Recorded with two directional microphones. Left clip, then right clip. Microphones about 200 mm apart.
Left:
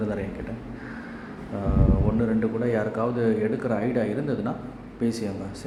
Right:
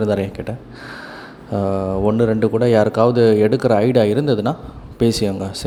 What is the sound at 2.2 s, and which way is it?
A man's voice, 40° right (ahead or behind).